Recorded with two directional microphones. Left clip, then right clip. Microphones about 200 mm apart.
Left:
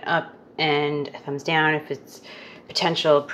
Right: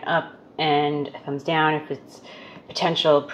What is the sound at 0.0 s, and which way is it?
Speech, 25° left (ahead or behind).